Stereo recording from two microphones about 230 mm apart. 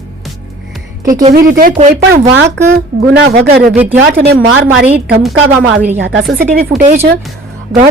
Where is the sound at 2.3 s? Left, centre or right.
Right.